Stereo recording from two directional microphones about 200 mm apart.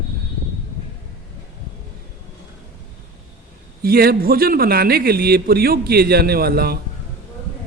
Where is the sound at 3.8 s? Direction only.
50° right (ahead or behind).